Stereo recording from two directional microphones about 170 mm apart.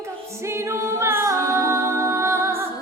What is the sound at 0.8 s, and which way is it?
A capella, 15° right (ahead or behind).